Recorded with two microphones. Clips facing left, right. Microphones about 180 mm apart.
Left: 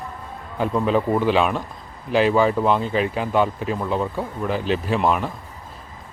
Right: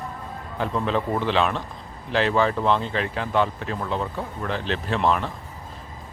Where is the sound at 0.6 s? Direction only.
10° left (ahead or behind).